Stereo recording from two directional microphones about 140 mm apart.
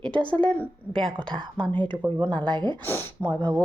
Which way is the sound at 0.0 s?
35° right (ahead or behind).